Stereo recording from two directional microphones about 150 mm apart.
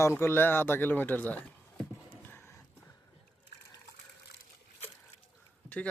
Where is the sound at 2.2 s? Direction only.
15° left (ahead or behind).